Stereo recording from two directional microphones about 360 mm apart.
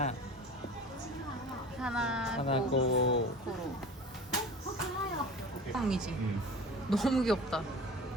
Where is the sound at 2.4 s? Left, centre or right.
Centre.